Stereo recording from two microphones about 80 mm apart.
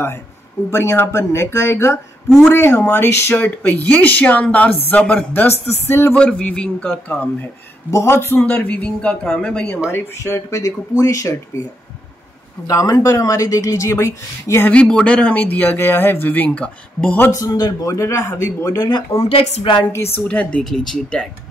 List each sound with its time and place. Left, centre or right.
0.7 s speech: left
2.2 s speech: centre
2.5 s speech: left
3.4 s speech: left
6.1 s speech: centre
7.9 s speech: left
8.5 s speech: left
9.8 s speech: left
12.6 s speech: left
14.7 s speech: centre
17.4 s speech: left
18.8 s speech: left
20.2 s speech: centre